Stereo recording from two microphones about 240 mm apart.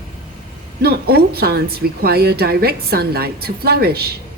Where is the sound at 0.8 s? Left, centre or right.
Right.